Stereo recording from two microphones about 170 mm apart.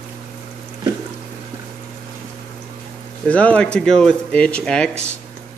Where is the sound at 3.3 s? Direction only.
10° left (ahead or behind).